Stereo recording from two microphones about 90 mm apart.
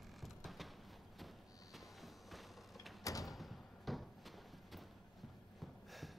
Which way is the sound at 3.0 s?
40° left (ahead or behind).